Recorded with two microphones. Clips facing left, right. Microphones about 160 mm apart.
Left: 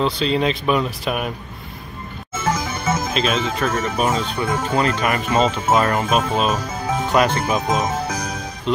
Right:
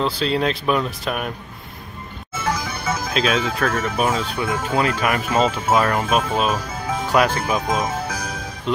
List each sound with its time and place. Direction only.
0.0 s speech: centre (ahead or behind)
2.4 s music: 25° left (ahead or behind)
3.1 s speech: centre (ahead or behind)
7.8 s music: 20° left (ahead or behind)
8.7 s music: 5° right (ahead or behind)